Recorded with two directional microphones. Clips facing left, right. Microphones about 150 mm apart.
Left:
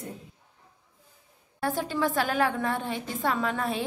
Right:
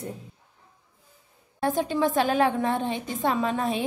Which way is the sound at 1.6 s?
20° right (ahead or behind).